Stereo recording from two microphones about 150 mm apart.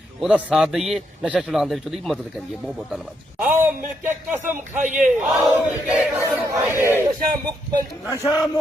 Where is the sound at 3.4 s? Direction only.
10° right (ahead or behind).